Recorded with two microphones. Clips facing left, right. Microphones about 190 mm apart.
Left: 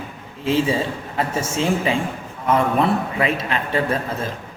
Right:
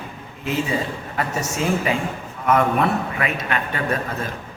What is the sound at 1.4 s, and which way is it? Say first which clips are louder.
Speech: left 1 dB; 30° left (ahead or behind).